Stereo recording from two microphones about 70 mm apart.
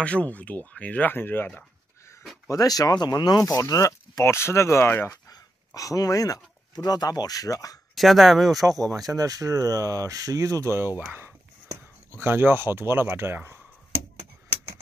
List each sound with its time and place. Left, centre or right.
0.0 s speech: centre
2.4 s speech: left
5.8 s speech: left
7.9 s speech: centre
9.1 s speech: right